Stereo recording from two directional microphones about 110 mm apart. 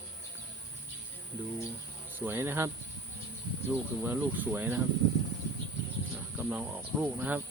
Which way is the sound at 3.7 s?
25° right (ahead or behind).